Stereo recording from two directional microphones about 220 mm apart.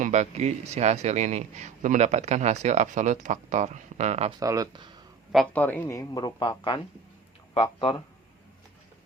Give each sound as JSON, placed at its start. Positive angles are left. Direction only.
{"t": 0.0, "sound": "a man's voice", "side_deg": -30}
{"t": 4.4, "sound": "speech", "side_deg": -15}
{"t": 5.3, "sound": "a man's voice", "side_deg": 5}